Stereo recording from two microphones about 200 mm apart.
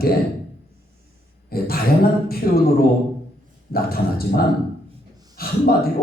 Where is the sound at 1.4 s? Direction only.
50° left (ahead or behind).